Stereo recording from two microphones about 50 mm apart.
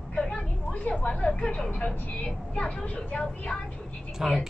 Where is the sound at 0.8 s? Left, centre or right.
Left.